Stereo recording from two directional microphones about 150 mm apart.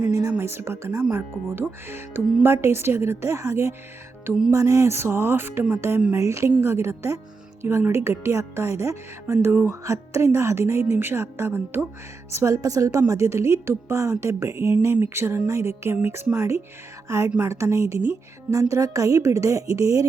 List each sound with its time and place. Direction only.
0.1 s a woman's voice: 20° right (ahead or behind)
4.3 s music: 5° right (ahead or behind)
4.5 s a woman's voice: 20° right (ahead or behind)